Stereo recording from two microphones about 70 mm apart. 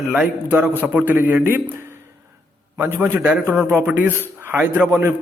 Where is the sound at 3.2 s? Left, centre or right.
Centre.